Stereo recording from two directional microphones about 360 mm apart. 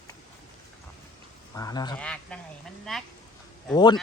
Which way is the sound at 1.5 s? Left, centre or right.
Centre.